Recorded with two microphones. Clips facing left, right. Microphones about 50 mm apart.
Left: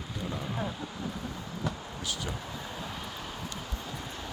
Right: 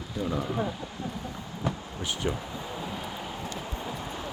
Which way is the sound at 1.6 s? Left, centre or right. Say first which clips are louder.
Right 4 dB; right.